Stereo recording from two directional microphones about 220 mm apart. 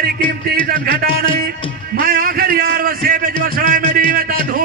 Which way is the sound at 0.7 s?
45° right (ahead or behind).